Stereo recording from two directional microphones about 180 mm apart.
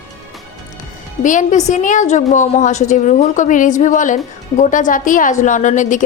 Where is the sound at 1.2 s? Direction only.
45° left (ahead or behind).